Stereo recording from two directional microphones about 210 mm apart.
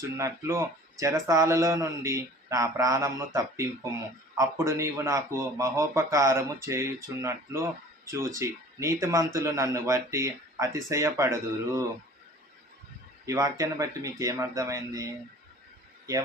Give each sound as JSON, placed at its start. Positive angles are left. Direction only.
{"t": 0.2, "sound": "speech", "side_deg": -15}
{"t": 13.2, "sound": "speech", "side_deg": -15}